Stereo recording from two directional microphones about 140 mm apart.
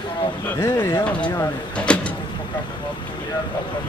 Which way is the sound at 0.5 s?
15° left (ahead or behind).